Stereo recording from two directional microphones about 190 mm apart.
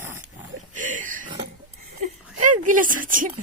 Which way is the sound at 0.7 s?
40° right (ahead or behind).